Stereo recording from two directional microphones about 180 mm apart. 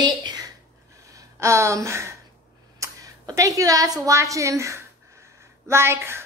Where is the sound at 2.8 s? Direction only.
20° right (ahead or behind).